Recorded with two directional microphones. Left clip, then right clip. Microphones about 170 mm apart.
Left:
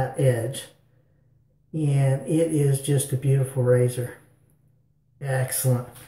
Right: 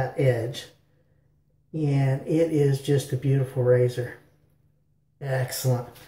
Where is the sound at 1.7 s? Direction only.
Centre (ahead or behind).